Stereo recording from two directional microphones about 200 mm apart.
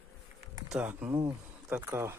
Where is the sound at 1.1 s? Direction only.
20° right (ahead or behind).